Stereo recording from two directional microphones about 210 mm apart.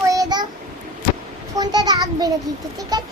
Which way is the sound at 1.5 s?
20° right (ahead or behind).